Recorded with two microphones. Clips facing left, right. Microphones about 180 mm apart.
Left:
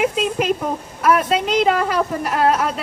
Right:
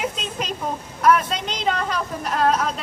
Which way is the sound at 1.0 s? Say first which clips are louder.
Left 2 dB; 5° left (ahead or behind).